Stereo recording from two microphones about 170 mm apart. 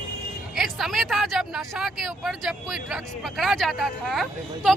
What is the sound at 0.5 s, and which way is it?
Speech, centre (ahead or behind).